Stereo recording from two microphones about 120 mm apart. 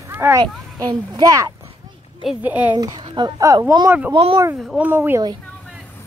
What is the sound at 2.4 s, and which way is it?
Speech, 10° right (ahead or behind).